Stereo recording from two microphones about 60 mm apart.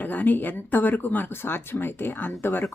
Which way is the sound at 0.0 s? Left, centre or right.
Left.